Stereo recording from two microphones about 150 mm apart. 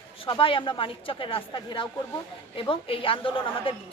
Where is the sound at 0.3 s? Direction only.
35° left (ahead or behind).